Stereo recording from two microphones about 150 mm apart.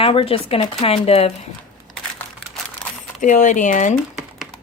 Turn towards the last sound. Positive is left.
turn(degrees=55)  # may be behind; listen again after turning